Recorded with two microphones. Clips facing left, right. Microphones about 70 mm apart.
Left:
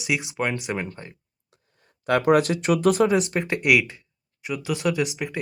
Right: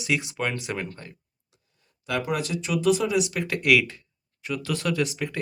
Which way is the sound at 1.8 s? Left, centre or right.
Left.